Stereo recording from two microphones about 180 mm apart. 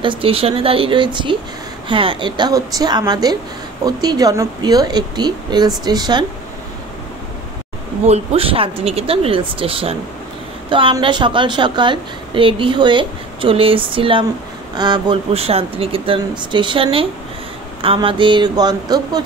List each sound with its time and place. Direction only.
0.0 s a woman's voice: 30° right (ahead or behind)
8.1 s a woman's voice: 35° right (ahead or behind)